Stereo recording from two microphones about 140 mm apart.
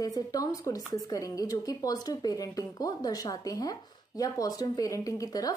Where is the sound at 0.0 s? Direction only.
25° left (ahead or behind).